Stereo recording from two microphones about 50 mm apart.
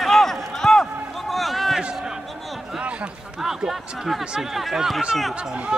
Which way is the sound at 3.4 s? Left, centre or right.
Centre.